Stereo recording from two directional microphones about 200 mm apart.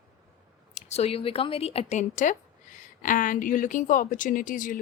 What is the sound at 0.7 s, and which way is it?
Speech, 35° left (ahead or behind).